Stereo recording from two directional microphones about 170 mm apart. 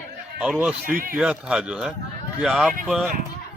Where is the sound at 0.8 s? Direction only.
55° right (ahead or behind).